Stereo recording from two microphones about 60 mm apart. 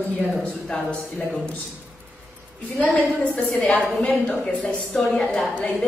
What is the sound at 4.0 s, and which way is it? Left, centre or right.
A woman's voice, left.